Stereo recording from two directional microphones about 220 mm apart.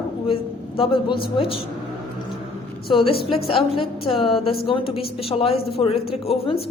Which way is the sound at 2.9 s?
25° left (ahead or behind).